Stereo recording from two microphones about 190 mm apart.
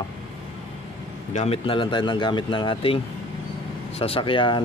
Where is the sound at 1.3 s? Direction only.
35° left (ahead or behind).